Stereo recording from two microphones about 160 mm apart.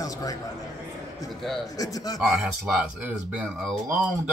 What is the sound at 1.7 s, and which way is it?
Speech, 20° left (ahead or behind).